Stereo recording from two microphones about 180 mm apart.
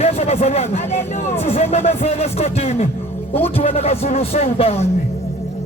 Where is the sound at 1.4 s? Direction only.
35° left (ahead or behind).